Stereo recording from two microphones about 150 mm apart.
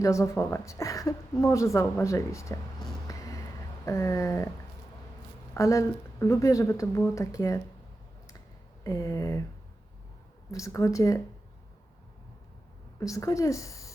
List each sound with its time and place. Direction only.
0.0 s speech: 20° left (ahead or behind)
3.1 s a sound: 20° left (ahead or behind)
5.5 s speech: 20° left (ahead or behind)
8.8 s speech: 20° left (ahead or behind)
10.5 s speech: 20° left (ahead or behind)
13.0 s speech: 20° left (ahead or behind)